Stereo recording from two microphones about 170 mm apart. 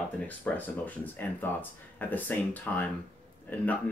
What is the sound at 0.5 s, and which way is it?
Speech, 10° left (ahead or behind).